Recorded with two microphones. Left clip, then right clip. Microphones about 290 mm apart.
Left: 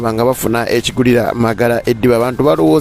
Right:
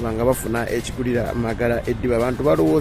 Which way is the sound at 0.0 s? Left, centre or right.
Left.